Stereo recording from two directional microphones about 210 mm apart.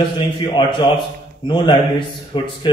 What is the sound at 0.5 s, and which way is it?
A man's voice, 20° left (ahead or behind).